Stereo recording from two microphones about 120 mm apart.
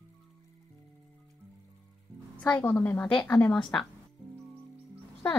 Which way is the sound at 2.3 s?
15° left (ahead or behind).